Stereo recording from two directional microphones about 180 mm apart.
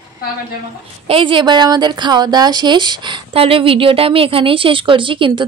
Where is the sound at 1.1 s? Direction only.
30° right (ahead or behind).